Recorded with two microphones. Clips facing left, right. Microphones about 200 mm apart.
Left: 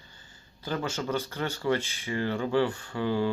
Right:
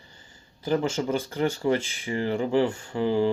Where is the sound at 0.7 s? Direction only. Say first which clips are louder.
Right 5 dB; 20° right (ahead or behind).